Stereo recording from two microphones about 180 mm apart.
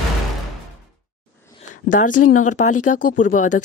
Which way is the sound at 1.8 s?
45° left (ahead or behind).